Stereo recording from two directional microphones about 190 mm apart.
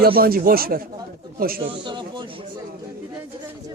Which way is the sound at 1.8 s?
25° right (ahead or behind).